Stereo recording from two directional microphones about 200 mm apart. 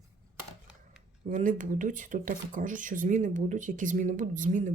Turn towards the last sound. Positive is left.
turn(degrees=-40)  # may be behind; listen again after turning